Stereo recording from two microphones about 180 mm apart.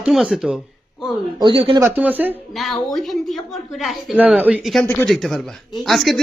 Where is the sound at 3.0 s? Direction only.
Centre (ahead or behind).